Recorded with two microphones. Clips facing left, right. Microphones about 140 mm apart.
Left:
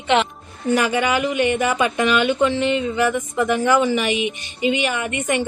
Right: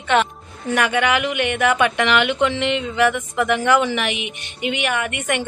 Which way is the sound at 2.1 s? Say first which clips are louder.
Left 1 dB; 70° right (ahead or behind).